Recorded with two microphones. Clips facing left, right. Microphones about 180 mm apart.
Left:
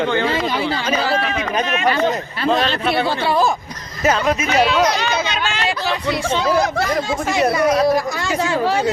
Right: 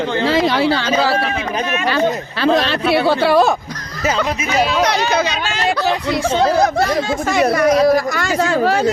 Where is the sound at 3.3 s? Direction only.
70° right (ahead or behind).